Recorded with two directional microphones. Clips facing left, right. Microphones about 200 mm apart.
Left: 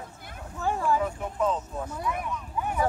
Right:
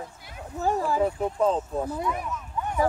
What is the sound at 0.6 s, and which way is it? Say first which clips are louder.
Speech: right 2 dB; 40° right (ahead or behind).